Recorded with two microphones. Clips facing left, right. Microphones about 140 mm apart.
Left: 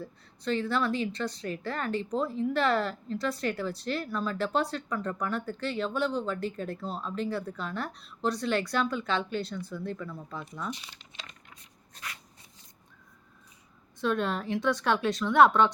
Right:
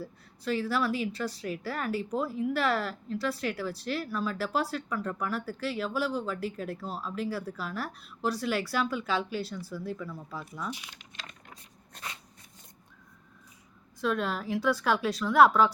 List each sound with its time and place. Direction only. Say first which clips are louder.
0.0 s speech: left 1 dB; 5° right (ahead or behind)
12.0 s a sound: right 1 dB; 60° right (ahead or behind)
14.0 s speech: left 1 dB; centre (ahead or behind)